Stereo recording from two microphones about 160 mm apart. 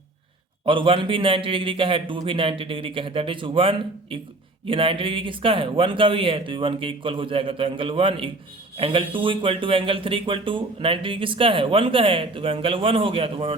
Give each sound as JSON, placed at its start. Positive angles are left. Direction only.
{"t": 0.6, "sound": "speech", "side_deg": -30}